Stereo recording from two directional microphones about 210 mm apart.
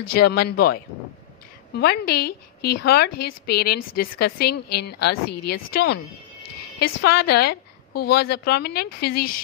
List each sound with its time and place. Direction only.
0.1 s a woman's voice: 45° left (ahead or behind)
7.0 s a woman's voice: 50° left (ahead or behind)